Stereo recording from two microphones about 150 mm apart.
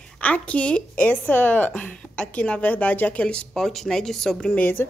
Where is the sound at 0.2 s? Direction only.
10° left (ahead or behind).